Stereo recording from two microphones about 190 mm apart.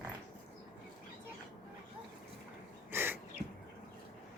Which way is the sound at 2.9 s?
10° right (ahead or behind).